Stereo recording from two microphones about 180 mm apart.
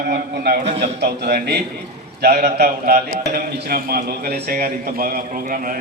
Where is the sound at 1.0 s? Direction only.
60° right (ahead or behind).